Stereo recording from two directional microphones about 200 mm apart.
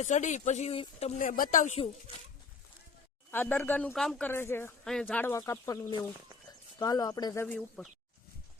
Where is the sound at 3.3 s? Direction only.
10° left (ahead or behind).